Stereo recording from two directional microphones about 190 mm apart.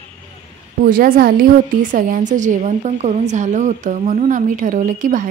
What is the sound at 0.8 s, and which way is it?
A woman's voice, 45° right (ahead or behind).